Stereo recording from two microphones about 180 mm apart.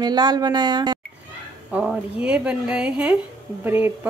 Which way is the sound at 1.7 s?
5° right (ahead or behind).